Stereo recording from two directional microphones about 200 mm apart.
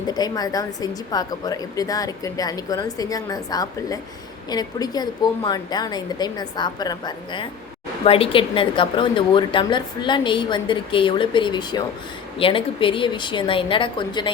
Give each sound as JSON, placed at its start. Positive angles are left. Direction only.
{"t": 0.1, "sound": "a woman's voice", "side_deg": 20}